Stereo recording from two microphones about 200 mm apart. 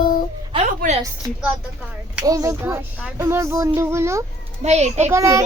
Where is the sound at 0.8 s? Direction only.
45° right (ahead or behind).